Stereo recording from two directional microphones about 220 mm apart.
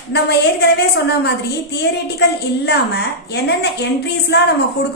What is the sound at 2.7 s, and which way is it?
A woman's voice, 50° left (ahead or behind).